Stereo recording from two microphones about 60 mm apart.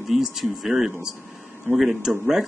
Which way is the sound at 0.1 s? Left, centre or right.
Centre.